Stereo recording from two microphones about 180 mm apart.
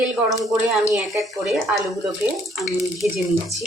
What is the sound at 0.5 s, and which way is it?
Speech, 5° right (ahead or behind).